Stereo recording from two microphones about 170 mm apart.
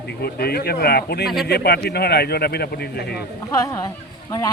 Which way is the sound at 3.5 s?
20° left (ahead or behind).